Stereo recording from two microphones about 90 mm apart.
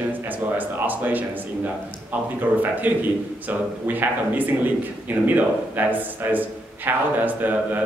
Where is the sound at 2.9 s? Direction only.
20° right (ahead or behind).